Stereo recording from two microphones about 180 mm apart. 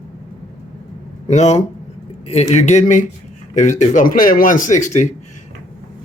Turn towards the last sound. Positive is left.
turn(degrees=45)  # may be behind; listen again after turning